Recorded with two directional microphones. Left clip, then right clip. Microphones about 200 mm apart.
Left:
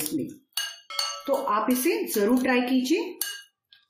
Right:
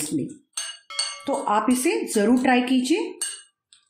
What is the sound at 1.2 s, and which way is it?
Dishes, 45° right (ahead or behind).